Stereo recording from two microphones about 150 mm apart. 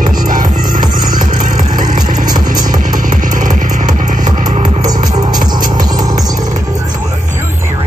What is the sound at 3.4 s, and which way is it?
Music, 55° right (ahead or behind).